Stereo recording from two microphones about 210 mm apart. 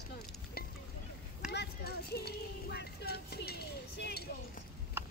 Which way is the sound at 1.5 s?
50° left (ahead or behind).